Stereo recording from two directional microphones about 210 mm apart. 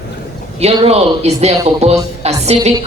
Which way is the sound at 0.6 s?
30° right (ahead or behind).